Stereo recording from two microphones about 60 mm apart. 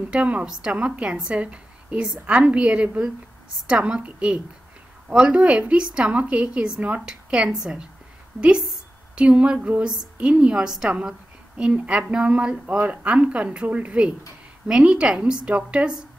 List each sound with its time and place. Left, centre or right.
0.1 s a woman's voice: centre
9.1 s a woman's voice: centre
11.1 s a sound: centre
11.9 s a woman's voice: centre